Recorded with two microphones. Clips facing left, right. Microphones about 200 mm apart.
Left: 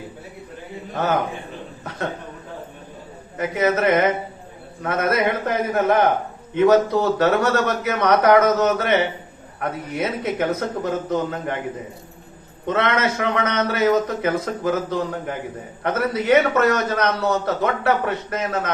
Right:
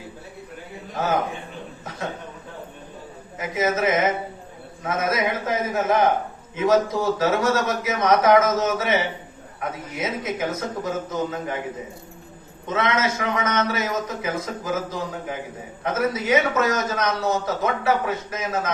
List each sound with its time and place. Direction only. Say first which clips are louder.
3.3 s a man's voice: left 3 dB; 65° left (ahead or behind)
12.6 s a man's voice: left 2 dB; 60° left (ahead or behind)